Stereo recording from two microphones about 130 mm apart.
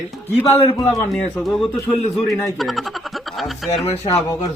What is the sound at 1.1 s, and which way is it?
Speech, centre (ahead or behind).